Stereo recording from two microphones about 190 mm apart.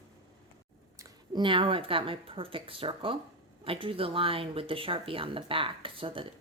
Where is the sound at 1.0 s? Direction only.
25° right (ahead or behind).